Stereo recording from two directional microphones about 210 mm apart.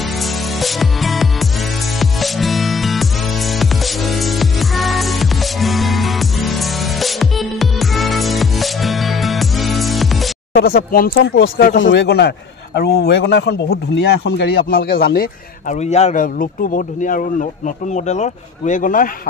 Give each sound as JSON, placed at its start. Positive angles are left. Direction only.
{"t": 0.2, "sound": "music", "side_deg": 0}
{"t": 10.5, "sound": "speech", "side_deg": 45}
{"t": 11.3, "sound": "a man's voice", "side_deg": 65}
{"t": 15.7, "sound": "speech", "side_deg": 30}